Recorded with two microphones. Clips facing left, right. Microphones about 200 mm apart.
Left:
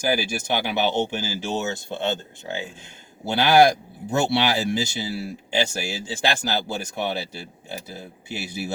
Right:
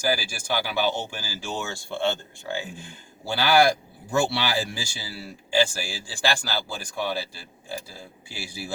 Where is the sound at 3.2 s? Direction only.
20° left (ahead or behind).